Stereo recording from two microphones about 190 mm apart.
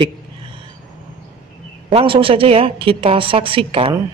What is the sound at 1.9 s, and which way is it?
A man's voice, 30° right (ahead or behind).